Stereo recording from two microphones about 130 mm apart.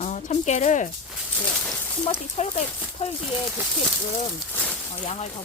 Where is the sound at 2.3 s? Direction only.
60° left (ahead or behind).